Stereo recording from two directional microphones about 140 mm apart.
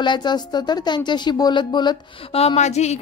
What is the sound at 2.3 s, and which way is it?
Speech, 45° left (ahead or behind).